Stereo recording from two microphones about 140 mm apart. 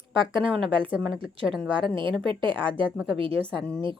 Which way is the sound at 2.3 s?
35° right (ahead or behind).